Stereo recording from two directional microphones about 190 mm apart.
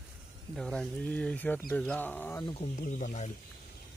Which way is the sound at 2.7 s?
40° left (ahead or behind).